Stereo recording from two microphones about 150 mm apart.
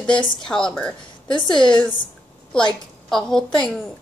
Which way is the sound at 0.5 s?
5° left (ahead or behind).